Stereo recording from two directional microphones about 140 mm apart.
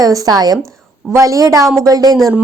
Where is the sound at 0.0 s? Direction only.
25° right (ahead or behind).